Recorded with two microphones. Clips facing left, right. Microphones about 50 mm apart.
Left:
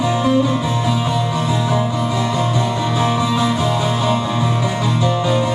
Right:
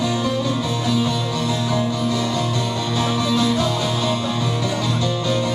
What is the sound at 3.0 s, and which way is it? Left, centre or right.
Music, left.